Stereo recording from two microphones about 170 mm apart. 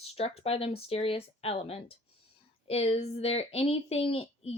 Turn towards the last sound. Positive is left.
turn(degrees=35)  # may be behind; listen again after turning